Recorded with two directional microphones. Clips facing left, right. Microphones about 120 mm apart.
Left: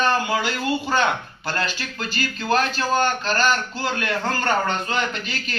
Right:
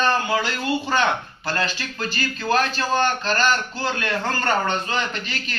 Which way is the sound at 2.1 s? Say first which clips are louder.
Even; 15° left (ahead or behind).